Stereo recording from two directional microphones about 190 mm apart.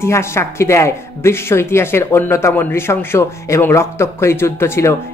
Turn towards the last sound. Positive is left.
turn(degrees=15)  # may be behind; listen again after turning